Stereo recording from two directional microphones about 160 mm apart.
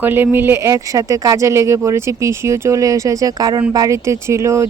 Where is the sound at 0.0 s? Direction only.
15° right (ahead or behind).